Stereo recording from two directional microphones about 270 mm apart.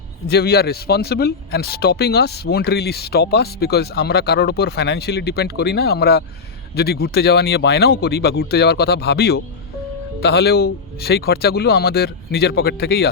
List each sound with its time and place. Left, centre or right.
0.3 s speech: left